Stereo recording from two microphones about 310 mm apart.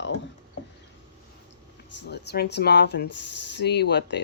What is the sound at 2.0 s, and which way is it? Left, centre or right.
Speech, left.